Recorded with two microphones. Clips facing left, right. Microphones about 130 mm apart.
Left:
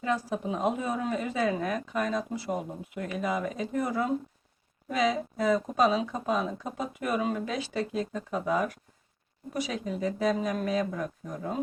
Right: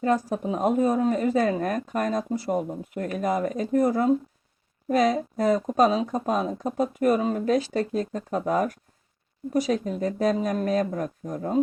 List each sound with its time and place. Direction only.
0.0 s speech: 45° right (ahead or behind)